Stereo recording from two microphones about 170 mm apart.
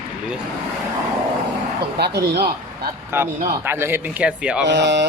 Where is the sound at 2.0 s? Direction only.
75° right (ahead or behind).